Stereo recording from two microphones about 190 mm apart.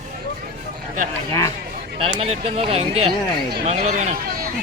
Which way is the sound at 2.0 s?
30° right (ahead or behind).